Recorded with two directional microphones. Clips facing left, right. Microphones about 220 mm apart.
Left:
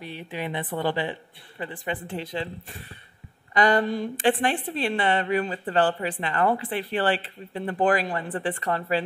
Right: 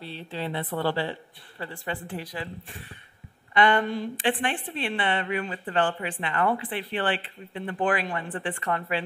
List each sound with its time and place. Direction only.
0.0 s a woman's voice: 15° left (ahead or behind)
3.5 s a woman's voice: 40° left (ahead or behind)